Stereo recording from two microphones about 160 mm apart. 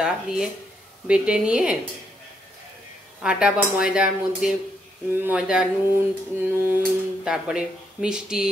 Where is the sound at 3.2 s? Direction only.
5° right (ahead or behind).